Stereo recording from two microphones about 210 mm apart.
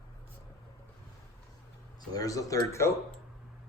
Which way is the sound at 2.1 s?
15° left (ahead or behind).